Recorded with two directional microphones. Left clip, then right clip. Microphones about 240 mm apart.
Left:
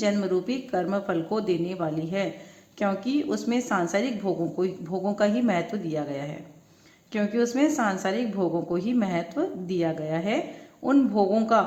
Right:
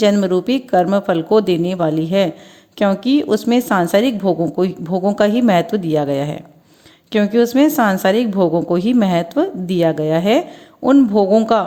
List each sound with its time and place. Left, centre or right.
0.0 s a woman's voice: right